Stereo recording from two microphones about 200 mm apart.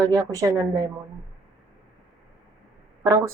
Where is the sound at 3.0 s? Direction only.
15° right (ahead or behind).